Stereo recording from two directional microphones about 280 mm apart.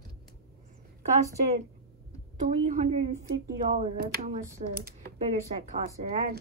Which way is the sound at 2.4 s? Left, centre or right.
Right.